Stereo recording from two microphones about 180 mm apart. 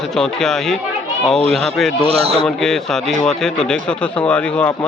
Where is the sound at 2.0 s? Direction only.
35° right (ahead or behind).